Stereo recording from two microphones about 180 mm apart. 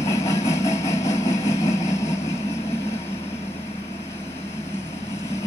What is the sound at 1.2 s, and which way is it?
Vehicle, 15° left (ahead or behind).